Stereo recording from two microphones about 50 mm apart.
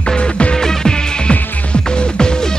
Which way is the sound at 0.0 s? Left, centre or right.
Left.